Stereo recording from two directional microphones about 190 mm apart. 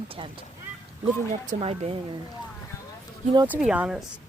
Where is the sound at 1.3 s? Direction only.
35° right (ahead or behind).